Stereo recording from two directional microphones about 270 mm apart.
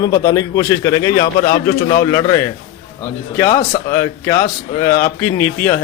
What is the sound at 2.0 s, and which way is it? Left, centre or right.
Speech, centre.